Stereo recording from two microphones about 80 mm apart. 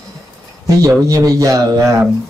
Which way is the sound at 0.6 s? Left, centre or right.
Right.